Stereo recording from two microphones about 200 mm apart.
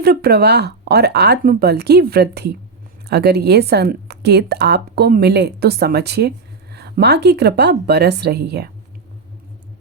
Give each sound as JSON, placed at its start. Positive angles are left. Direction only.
{"t": 0.0, "sound": "a woman's voice", "side_deg": -50}